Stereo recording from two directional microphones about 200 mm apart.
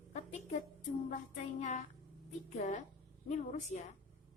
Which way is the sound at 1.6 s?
35° left (ahead or behind).